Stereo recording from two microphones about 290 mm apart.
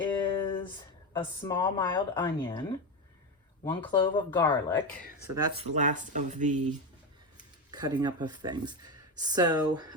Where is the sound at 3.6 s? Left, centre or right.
Centre.